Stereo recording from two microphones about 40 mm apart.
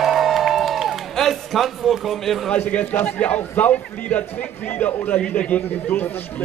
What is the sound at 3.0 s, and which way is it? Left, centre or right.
A man's voice, left.